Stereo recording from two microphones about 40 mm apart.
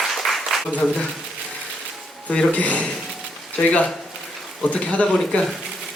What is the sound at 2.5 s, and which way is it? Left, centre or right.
Speech, left.